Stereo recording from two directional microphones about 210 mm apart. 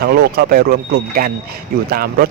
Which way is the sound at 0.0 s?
50° right (ahead or behind).